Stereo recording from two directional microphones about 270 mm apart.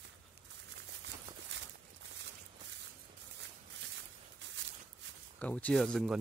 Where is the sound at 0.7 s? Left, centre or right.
Right.